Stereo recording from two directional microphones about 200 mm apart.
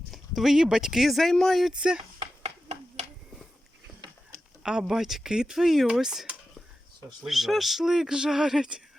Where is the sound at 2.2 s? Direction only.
30° right (ahead or behind).